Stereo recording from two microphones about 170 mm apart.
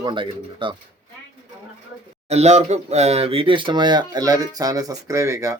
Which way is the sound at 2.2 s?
40° right (ahead or behind).